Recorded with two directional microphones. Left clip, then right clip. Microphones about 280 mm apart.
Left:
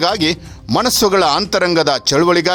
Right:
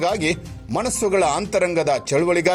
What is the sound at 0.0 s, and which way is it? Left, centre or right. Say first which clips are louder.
Speech: left 5 dB; left.